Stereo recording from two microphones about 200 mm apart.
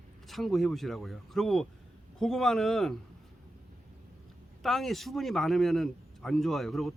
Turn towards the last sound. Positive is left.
turn(degrees=0)  # may be behind; listen again after turning